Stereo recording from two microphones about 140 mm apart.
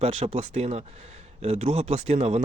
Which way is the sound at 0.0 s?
50° right (ahead or behind).